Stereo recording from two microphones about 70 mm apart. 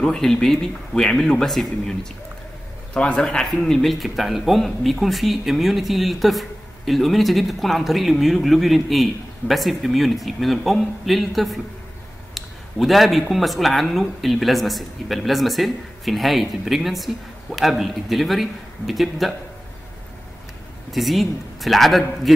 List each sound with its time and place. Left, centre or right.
0.0 s speech: centre
12.4 s a sound: centre
13.3 s speech: centre
20.9 s speech: centre